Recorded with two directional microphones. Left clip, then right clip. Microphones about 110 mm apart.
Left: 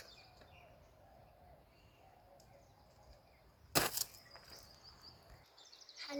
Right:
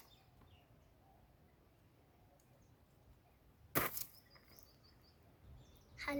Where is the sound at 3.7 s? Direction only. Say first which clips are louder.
Left 4 dB; 50° left (ahead or behind).